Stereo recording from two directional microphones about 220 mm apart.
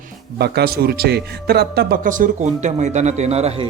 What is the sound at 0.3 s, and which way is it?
A man's voice, 45° right (ahead or behind).